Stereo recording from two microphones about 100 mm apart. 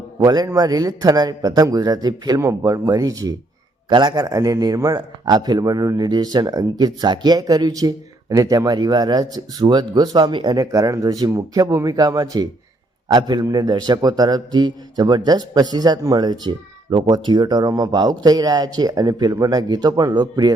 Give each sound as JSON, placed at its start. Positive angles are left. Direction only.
{"t": 0.2, "sound": "a man's voice", "side_deg": -40}
{"t": 2.4, "sound": "a man's voice", "side_deg": -30}
{"t": 3.8, "sound": "a man's voice", "side_deg": -50}